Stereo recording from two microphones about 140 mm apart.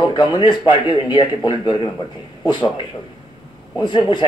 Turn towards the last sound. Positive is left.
turn(degrees=35)  # may be behind; listen again after turning